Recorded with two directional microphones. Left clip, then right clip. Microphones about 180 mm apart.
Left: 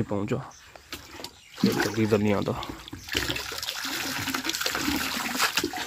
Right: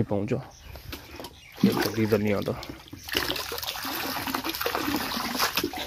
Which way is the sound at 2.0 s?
10° left (ahead or behind).